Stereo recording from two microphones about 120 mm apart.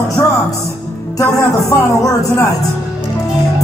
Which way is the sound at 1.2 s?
25° left (ahead or behind).